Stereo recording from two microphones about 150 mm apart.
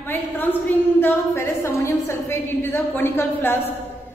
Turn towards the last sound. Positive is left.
turn(degrees=15)  # may be behind; listen again after turning